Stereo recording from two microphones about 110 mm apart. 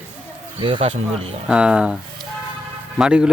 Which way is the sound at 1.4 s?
10° right (ahead or behind).